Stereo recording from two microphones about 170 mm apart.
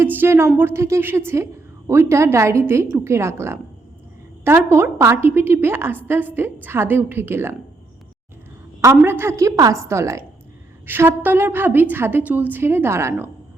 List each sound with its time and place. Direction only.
0.0 s a woman's voice: 15° right (ahead or behind)
8.8 s a woman's voice: 15° right (ahead or behind)